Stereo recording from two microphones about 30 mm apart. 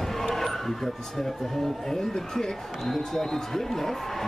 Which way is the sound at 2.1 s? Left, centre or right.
Centre.